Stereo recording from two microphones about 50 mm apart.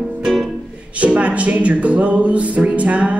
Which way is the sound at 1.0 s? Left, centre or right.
Right.